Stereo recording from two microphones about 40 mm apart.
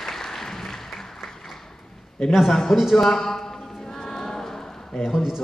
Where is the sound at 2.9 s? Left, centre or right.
Centre.